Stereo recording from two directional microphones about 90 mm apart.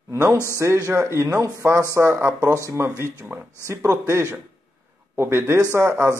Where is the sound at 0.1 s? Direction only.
30° right (ahead or behind).